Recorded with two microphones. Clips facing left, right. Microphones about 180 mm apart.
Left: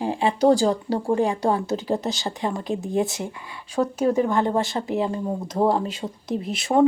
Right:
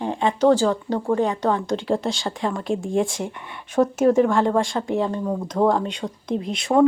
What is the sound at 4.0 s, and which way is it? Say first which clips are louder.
Speech: right 4 dB; 45° right (ahead or behind).